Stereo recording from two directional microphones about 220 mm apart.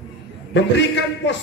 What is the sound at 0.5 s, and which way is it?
Speech, 55° left (ahead or behind).